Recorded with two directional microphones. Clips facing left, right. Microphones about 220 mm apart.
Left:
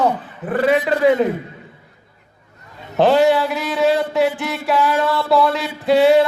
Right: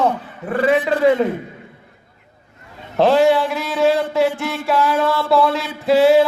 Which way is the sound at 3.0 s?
Centre (ahead or behind).